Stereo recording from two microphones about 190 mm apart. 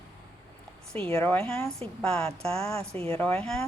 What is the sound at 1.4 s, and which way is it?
A woman's voice, 10° left (ahead or behind).